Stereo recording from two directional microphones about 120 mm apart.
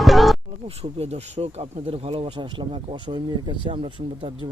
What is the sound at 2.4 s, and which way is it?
Speech, 40° right (ahead or behind).